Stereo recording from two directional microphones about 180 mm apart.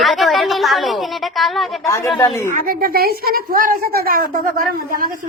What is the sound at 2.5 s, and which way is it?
A woman's voice, 55° right (ahead or behind).